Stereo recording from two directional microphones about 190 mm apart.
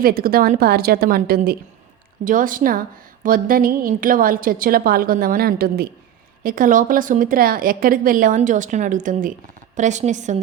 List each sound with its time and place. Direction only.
0.0 s a woman's voice: 50° right (ahead or behind)